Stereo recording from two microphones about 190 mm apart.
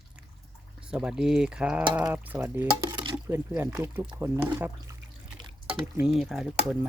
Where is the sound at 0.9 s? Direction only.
5° right (ahead or behind).